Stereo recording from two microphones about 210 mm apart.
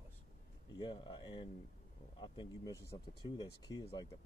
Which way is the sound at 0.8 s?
20° left (ahead or behind).